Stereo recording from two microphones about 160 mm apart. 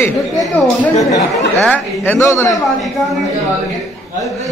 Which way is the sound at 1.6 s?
10° left (ahead or behind).